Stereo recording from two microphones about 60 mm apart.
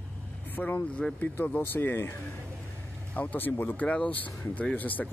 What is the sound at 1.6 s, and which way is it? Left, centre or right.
Speech, left.